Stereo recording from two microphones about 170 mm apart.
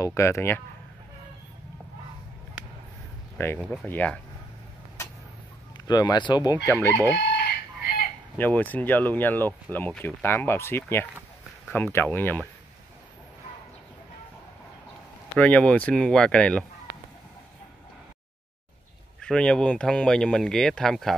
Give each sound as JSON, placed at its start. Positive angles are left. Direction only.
{"t": 0.0, "sound": "speech", "side_deg": 15}
{"t": 3.4, "sound": "speech", "side_deg": 15}
{"t": 5.9, "sound": "speech", "side_deg": 25}
{"t": 7.8, "sound": "chicken", "side_deg": 65}
{"t": 8.4, "sound": "speech", "side_deg": 10}
{"t": 15.3, "sound": "speech", "side_deg": 10}
{"t": 19.2, "sound": "speech", "side_deg": 5}